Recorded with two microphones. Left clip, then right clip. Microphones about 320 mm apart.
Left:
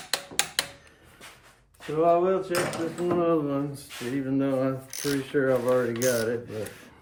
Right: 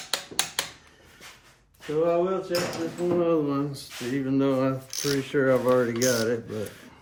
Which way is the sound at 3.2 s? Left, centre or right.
Centre.